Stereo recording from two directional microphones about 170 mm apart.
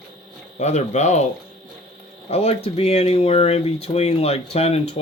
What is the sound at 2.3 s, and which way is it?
Speech, 35° left (ahead or behind).